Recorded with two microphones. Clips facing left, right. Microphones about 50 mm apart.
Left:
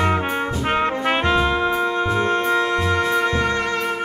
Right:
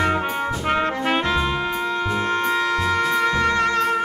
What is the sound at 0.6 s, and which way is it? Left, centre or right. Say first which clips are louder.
Brass instrument: left 1 dB; centre.